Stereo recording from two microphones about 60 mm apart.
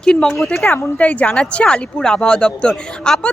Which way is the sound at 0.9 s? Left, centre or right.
Left.